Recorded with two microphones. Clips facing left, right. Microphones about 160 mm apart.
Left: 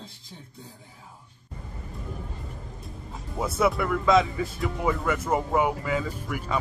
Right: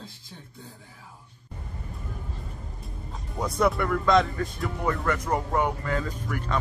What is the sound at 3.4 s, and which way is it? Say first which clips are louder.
Speech: even; 5° left (ahead or behind).